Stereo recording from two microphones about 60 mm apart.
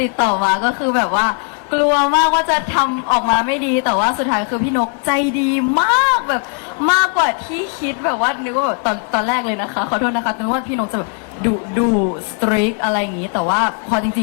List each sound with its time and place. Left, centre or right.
0.0 s speech: left